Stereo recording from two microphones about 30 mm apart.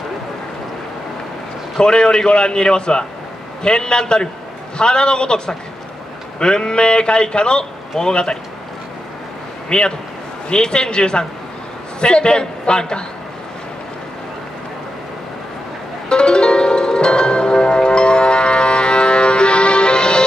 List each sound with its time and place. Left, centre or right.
1.8 s a man's voice: left
9.7 s a man's voice: left
16.1 s music: left